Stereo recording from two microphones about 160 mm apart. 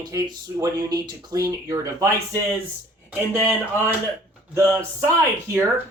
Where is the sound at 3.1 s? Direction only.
10° right (ahead or behind).